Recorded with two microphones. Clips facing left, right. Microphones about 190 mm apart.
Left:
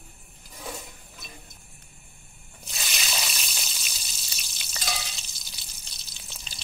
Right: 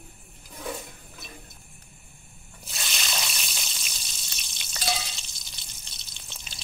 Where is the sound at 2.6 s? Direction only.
Centre (ahead or behind).